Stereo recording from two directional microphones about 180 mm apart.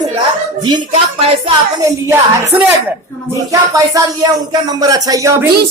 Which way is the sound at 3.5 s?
20° right (ahead or behind).